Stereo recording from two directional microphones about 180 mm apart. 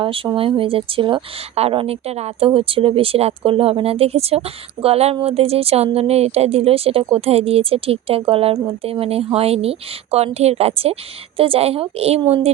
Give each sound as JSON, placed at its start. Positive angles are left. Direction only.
{"t": 0.0, "sound": "speech", "side_deg": -30}